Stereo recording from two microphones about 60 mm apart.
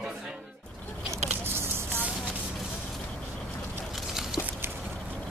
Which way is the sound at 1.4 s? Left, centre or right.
Right.